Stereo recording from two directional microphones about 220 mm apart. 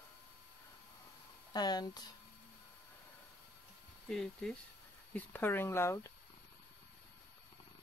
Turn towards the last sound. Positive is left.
turn(degrees=10)  # may be behind; listen again after turning